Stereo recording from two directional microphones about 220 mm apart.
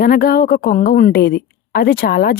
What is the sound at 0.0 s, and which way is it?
A woman's voice, 40° left (ahead or behind).